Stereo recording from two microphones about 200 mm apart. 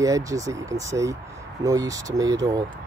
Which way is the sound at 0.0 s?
15° right (ahead or behind).